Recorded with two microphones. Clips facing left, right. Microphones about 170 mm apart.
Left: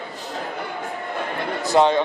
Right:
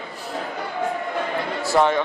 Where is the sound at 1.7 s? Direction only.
20° left (ahead or behind).